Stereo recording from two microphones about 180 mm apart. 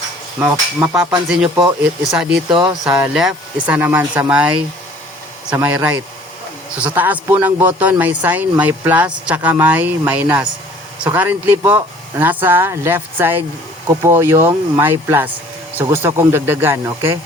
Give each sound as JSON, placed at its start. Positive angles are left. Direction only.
{"t": 0.3, "sound": "speech", "side_deg": -10}
{"t": 1.5, "sound": "speech", "side_deg": -15}
{"t": 2.0, "sound": "speech", "side_deg": -5}
{"t": 2.5, "sound": "speech", "side_deg": -25}
{"t": 2.9, "sound": "speech", "side_deg": -5}
{"t": 5.5, "sound": "speech", "side_deg": -10}